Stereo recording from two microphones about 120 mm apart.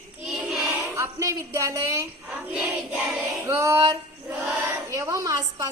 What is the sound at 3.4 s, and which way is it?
A woman's voice, 25° right (ahead or behind).